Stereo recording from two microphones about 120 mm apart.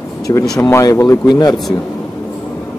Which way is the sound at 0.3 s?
25° left (ahead or behind).